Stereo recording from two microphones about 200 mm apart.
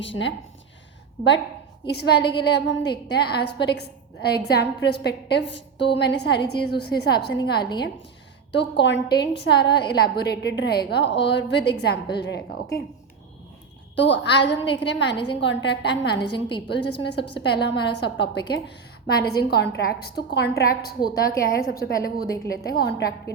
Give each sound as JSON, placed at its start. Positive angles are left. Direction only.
{"t": 0.0, "sound": "a woman's voice", "side_deg": 65}
{"t": 1.9, "sound": "a woman's voice", "side_deg": 55}
{"t": 13.9, "sound": "a woman's voice", "side_deg": 65}
{"t": 16.3, "sound": "a woman's voice", "side_deg": 25}
{"t": 16.6, "sound": "a woman's voice", "side_deg": 55}